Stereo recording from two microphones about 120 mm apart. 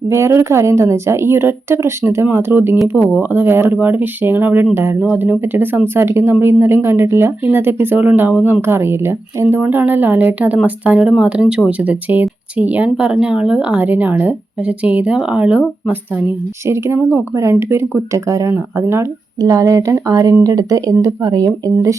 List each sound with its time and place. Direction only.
0.1 s speech: 20° right (ahead or behind)